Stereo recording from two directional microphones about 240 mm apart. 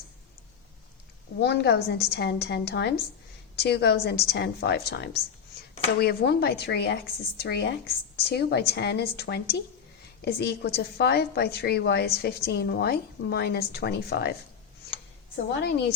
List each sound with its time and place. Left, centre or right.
1.4 s a woman's voice: left
15.5 s a woman's voice: left